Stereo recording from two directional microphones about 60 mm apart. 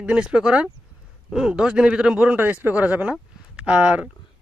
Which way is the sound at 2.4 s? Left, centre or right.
Right.